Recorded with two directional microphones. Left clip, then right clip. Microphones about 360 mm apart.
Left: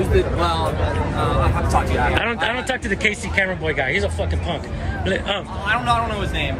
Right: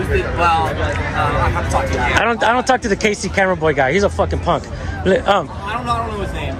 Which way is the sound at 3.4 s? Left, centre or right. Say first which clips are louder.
Right 7 dB; right.